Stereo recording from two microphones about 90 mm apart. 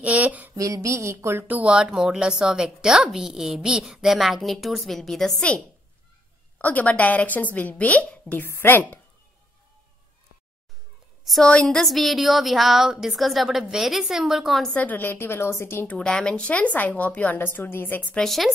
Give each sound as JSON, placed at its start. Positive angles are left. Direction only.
{"t": 0.0, "sound": "a sound", "side_deg": -15}
{"t": 0.6, "sound": "speech", "side_deg": -40}
{"t": 1.5, "sound": "a woman's voice", "side_deg": -15}
{"t": 6.6, "sound": "a woman's voice", "side_deg": 15}
{"t": 11.2, "sound": "a woman's voice", "side_deg": 5}
{"t": 14.7, "sound": "a woman's voice", "side_deg": 20}
{"t": 16.0, "sound": "a woman's voice", "side_deg": 5}
{"t": 18.1, "sound": "a woman's voice", "side_deg": 5}